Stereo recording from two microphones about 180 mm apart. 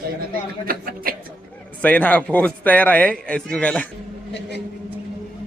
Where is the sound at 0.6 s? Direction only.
55° right (ahead or behind).